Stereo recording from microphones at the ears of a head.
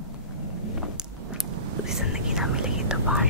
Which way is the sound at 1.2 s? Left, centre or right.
Right.